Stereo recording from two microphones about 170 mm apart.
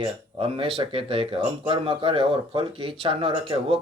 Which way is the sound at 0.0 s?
35° right (ahead or behind).